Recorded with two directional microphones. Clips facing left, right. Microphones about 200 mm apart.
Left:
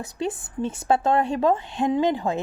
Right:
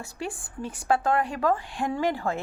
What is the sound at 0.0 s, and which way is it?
A woman's voice, 20° left (ahead or behind).